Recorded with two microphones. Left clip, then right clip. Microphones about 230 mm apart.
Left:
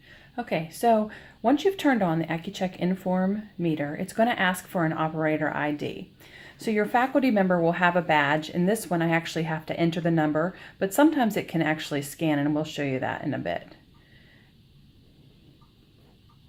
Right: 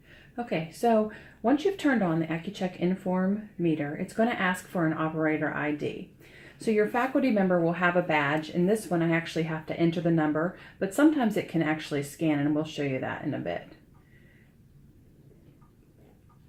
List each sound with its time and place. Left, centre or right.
1.4 s speech: left